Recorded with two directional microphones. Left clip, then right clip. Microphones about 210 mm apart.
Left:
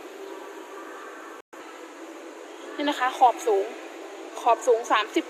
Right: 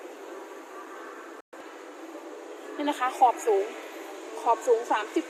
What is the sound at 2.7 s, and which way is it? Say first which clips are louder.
A woman's voice: left 2 dB; 5° left (ahead or behind).